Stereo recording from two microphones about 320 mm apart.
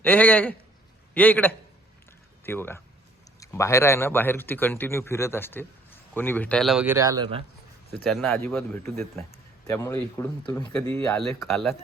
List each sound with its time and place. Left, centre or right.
0.0 s speech: centre
7.9 s speech: centre